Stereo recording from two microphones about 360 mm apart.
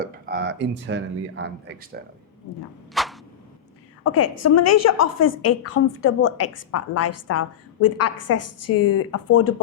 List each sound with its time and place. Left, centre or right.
0.0 s speech: right
2.9 s a sound: centre
4.0 s a woman's voice: left